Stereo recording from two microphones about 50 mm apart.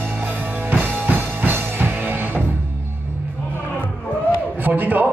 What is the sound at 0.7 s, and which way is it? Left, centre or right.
Music, right.